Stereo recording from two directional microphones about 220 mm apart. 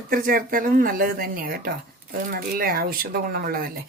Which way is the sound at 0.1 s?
40° right (ahead or behind).